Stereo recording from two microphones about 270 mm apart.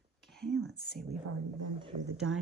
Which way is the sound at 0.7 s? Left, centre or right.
Left.